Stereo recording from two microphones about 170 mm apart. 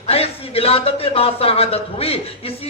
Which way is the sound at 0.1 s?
35° left (ahead or behind).